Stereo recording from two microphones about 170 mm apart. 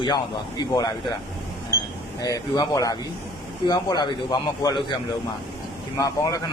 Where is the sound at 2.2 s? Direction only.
20° left (ahead or behind).